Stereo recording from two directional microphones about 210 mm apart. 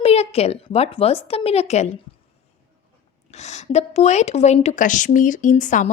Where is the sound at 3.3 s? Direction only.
30° left (ahead or behind).